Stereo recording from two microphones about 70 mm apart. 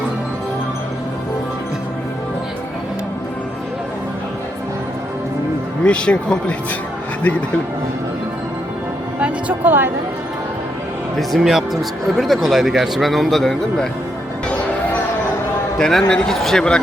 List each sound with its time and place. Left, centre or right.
5.8 s a man's voice: centre
9.2 s a woman's voice: right
11.2 s speech: centre
15.8 s a man's voice: centre